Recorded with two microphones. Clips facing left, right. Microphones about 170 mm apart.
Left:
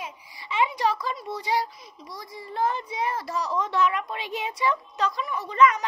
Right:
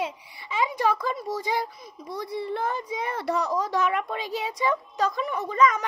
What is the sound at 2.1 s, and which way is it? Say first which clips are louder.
A child's voice: right 9 dB; 65° right (ahead or behind).